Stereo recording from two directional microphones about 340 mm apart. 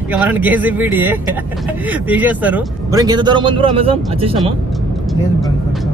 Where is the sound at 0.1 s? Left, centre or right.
Centre.